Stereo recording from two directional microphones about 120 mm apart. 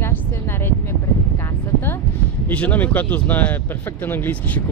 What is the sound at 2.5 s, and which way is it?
Speech, 15° left (ahead or behind).